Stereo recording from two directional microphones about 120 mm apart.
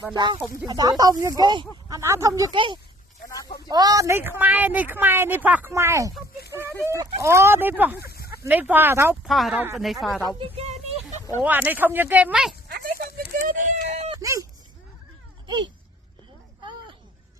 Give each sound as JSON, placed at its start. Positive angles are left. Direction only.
{"t": 0.1, "sound": "speech", "side_deg": -40}
{"t": 0.3, "sound": "speech", "side_deg": -5}
{"t": 0.7, "sound": "speech", "side_deg": -30}
{"t": 2.0, "sound": "speech", "side_deg": -25}
{"t": 3.2, "sound": "a sound", "side_deg": 30}
{"t": 3.7, "sound": "speech", "side_deg": -35}
{"t": 5.7, "sound": "speech", "side_deg": -25}
{"t": 9.2, "sound": "speech", "side_deg": 0}
{"t": 10.3, "sound": "a woman's voice", "side_deg": -50}
{"t": 11.4, "sound": "speech", "side_deg": -15}
{"t": 13.5, "sound": "a sound", "side_deg": -90}
{"t": 14.2, "sound": "speech", "side_deg": -30}